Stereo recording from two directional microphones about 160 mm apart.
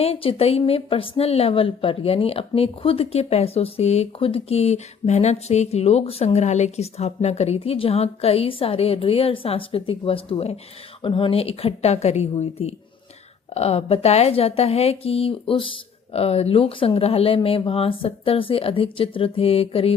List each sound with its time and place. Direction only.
0.0 s a woman's voice: 40° left (ahead or behind)